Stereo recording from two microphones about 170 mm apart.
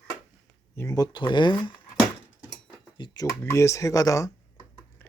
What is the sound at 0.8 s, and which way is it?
Speech, 20° left (ahead or behind).